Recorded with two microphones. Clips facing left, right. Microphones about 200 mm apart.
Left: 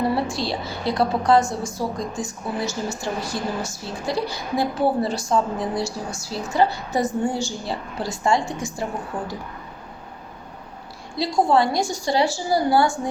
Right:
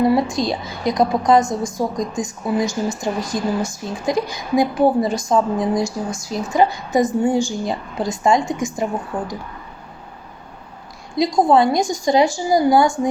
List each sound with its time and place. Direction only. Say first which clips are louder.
0.1 s a woman's voice: right 6 dB; 15° right (ahead or behind)
11.2 s a woman's voice: right 4 dB; 20° right (ahead or behind)